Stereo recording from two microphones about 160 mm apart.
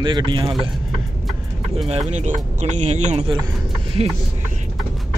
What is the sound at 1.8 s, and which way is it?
Speech, 45° right (ahead or behind).